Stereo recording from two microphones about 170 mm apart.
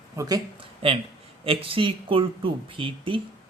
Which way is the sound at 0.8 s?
35° right (ahead or behind).